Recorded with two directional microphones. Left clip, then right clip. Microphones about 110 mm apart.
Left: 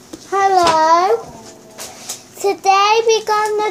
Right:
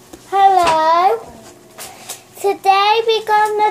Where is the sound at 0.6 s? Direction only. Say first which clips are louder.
Left 1 dB; 75° left (ahead or behind).